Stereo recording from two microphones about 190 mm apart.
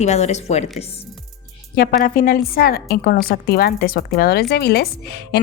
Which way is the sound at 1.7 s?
50° left (ahead or behind).